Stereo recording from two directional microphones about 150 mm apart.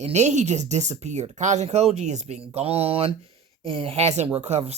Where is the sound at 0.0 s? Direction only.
50° right (ahead or behind).